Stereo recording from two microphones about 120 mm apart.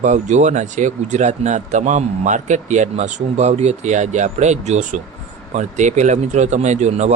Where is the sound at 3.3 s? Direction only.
70° right (ahead or behind).